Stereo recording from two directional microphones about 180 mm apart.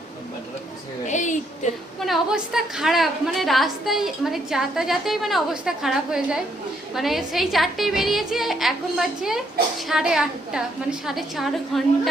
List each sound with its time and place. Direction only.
1.0 s a sound: 40° left (ahead or behind)
1.6 s a woman's voice: 45° left (ahead or behind)
2.0 s a woman's voice: centre (ahead or behind)